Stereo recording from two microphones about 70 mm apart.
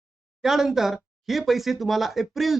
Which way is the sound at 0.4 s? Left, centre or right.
Centre.